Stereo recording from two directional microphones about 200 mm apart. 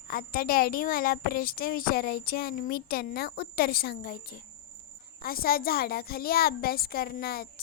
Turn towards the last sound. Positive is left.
turn(degrees=50)  # may be behind; listen again after turning